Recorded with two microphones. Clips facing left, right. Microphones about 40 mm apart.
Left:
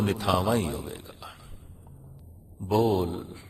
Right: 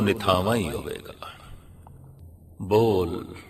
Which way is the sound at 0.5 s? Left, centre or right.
Right.